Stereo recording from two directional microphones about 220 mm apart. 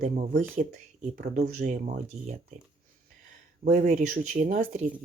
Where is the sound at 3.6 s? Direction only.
35° right (ahead or behind).